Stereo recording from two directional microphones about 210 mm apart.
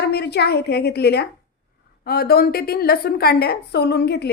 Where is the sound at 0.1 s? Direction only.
50° left (ahead or behind).